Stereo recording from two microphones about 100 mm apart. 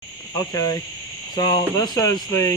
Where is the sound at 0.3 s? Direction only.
35° left (ahead or behind).